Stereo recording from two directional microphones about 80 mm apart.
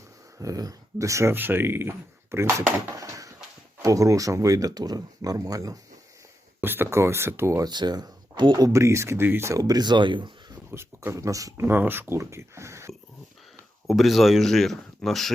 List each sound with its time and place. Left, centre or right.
0.3 s speech: right
1.3 s speech: right
2.9 s a sound: right
3.8 s speech: right
6.6 s speech: right
7.6 s speech: right
8.5 s speech: right
9.6 s speech: right
10.7 s speech: right
11.1 s speech: right
11.6 s speech: right
13.8 s speech: centre